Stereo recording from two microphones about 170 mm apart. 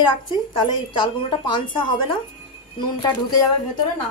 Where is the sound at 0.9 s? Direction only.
30° left (ahead or behind).